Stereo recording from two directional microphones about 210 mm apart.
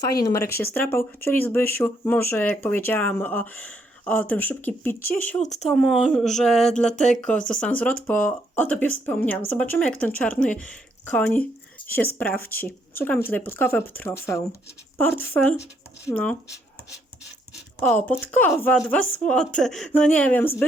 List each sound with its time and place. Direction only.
0.2 s speech: 15° left (ahead or behind)
6.9 s speech: 35° left (ahead or behind)
7.5 s speech: 5° left (ahead or behind)
12.5 s speech: 10° left (ahead or behind)
17.7 s speech: 10° left (ahead or behind)